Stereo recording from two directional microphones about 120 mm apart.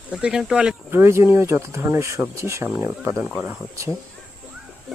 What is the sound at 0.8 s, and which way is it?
Speech, 20° right (ahead or behind).